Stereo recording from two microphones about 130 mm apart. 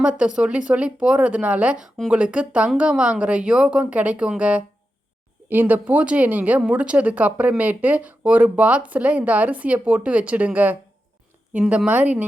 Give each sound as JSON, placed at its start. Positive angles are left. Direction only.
{"t": 0.0, "sound": "speech", "side_deg": -10}